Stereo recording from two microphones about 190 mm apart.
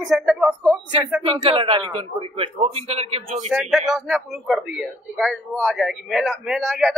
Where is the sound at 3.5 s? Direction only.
Centre (ahead or behind).